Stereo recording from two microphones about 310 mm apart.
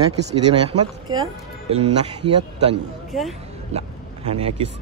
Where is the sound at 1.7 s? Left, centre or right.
Centre.